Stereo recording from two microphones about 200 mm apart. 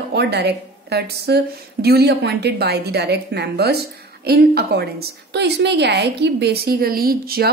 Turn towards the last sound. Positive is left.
turn(degrees=-50)  # may be behind; listen again after turning